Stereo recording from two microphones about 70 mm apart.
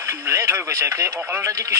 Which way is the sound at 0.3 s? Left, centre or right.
Right.